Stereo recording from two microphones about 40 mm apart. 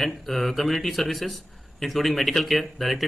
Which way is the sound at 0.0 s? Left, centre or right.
Centre.